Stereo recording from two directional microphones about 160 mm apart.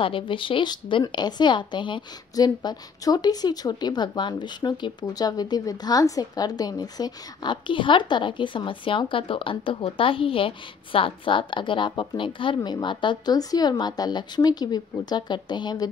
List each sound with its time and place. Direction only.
0.0 s a woman's voice: 35° left (ahead or behind)